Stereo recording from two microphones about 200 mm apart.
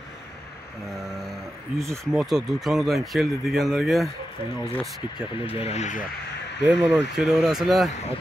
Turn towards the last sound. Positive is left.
turn(degrees=0)  # may be behind; listen again after turning